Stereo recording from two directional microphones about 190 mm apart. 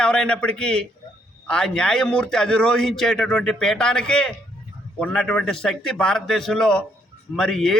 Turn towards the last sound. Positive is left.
turn(degrees=0)  # may be behind; listen again after turning